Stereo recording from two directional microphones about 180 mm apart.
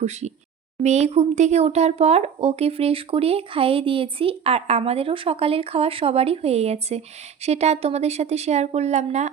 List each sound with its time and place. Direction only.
0.0 s speech: 40° right (ahead or behind)